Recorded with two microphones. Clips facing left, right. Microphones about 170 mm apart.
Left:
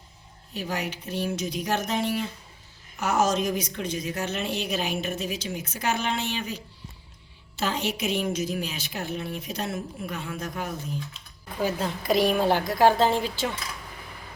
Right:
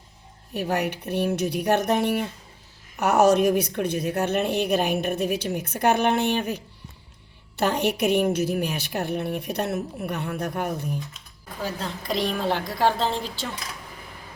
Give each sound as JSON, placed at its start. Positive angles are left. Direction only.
{"t": 0.5, "sound": "a woman's voice", "side_deg": -60}
{"t": 11.6, "sound": "a woman's voice", "side_deg": 5}